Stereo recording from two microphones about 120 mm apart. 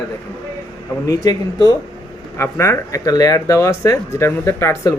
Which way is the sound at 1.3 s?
30° left (ahead or behind).